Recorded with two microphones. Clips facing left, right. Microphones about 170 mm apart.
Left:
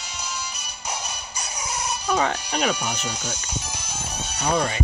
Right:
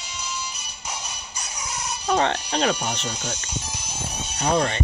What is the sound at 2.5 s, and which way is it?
Speech, 35° right (ahead or behind).